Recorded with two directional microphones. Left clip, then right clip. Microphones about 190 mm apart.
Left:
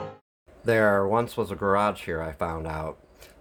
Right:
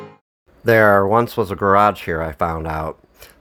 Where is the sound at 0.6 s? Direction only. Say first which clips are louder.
Right 9 dB; 45° right (ahead or behind).